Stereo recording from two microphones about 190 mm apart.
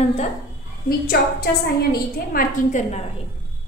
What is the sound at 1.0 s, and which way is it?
Speech, 50° left (ahead or behind).